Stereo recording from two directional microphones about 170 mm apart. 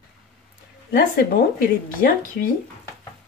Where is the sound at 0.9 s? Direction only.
60° left (ahead or behind).